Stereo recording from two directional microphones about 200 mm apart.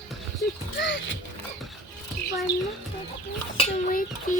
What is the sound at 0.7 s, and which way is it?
Speech, 65° left (ahead or behind).